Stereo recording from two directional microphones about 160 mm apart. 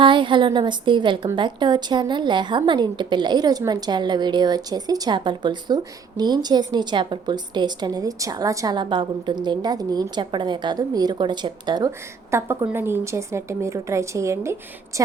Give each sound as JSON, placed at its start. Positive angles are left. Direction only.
{"t": 0.0, "sound": "a woman's voice", "side_deg": -30}
{"t": 11.9, "sound": "a woman's voice", "side_deg": -15}